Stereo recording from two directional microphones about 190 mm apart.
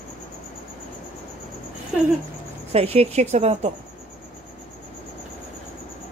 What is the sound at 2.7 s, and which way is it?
Speech, 30° right (ahead or behind).